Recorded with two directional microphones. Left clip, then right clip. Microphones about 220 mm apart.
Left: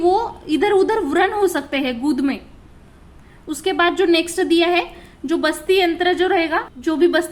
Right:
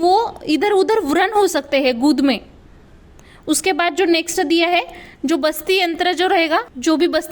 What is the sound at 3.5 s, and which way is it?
A woman's voice, 35° right (ahead or behind).